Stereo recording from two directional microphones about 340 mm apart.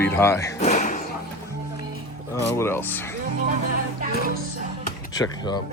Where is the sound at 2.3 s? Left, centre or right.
Centre.